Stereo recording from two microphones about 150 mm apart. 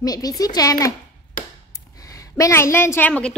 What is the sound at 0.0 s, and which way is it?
Speech, 25° left (ahead or behind).